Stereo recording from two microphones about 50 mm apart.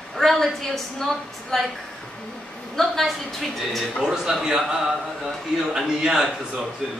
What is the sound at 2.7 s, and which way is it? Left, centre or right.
A woman's voice, centre.